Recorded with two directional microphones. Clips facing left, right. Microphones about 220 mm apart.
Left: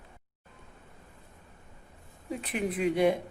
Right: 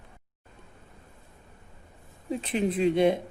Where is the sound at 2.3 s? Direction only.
25° right (ahead or behind).